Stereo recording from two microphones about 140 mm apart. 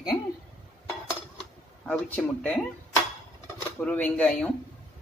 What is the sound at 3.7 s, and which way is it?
Speech, 10° left (ahead or behind).